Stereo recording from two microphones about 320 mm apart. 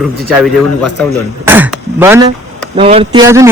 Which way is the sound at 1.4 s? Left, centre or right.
Centre.